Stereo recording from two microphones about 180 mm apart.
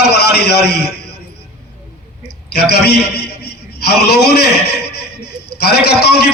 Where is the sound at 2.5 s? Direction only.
65° left (ahead or behind).